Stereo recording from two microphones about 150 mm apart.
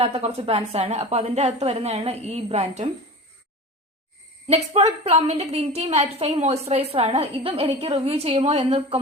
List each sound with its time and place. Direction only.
0.0 s a woman's voice: 45° right (ahead or behind)
4.4 s a woman's voice: 45° right (ahead or behind)